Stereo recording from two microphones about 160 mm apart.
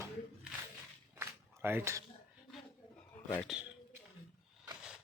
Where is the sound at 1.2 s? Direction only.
15° right (ahead or behind).